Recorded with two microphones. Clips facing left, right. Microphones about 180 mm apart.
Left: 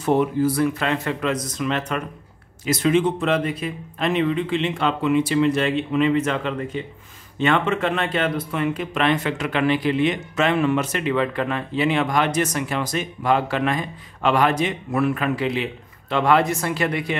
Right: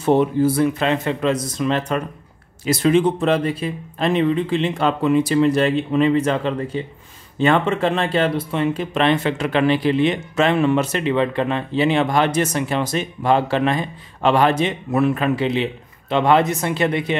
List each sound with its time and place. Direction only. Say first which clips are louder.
0.0 s speech: right 3 dB; 30° right (ahead or behind)